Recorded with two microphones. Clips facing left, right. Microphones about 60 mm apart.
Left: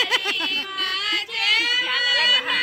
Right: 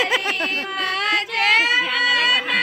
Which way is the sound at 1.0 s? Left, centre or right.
Right.